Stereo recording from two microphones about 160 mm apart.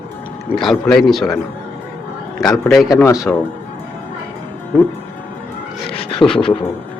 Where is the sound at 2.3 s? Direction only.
Centre (ahead or behind).